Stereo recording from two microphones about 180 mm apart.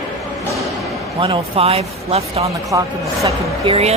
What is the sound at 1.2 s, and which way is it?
Speech, 35° right (ahead or behind).